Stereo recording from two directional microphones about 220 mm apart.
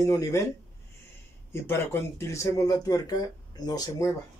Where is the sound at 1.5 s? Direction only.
10° left (ahead or behind).